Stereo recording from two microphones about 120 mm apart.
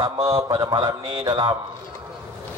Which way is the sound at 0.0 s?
25° right (ahead or behind).